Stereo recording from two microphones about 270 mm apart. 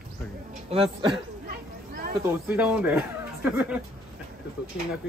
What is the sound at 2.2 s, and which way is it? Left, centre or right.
Speech, centre.